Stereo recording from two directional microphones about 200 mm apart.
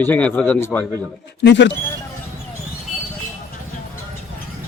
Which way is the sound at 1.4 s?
60° left (ahead or behind).